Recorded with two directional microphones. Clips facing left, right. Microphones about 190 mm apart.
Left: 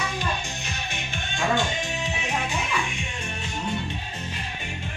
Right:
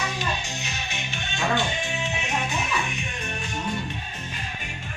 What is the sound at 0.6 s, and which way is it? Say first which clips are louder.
Music: even; 55° left (ahead or behind).